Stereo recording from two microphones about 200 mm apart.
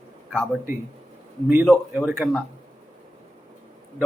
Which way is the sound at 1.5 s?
5° right (ahead or behind).